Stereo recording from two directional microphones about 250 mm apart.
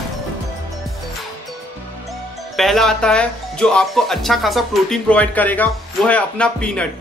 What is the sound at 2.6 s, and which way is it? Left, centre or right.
Speech, centre.